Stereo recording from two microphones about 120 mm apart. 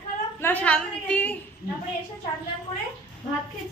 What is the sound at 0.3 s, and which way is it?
A woman's voice, 15° left (ahead or behind).